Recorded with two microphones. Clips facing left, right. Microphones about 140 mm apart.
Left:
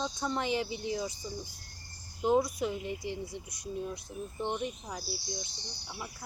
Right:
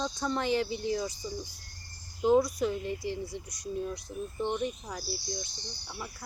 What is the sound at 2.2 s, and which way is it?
A woman's voice, 20° left (ahead or behind).